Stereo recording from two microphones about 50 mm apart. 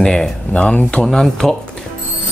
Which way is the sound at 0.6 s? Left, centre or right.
Left.